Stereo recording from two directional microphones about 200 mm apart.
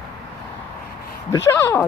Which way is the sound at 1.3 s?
15° left (ahead or behind).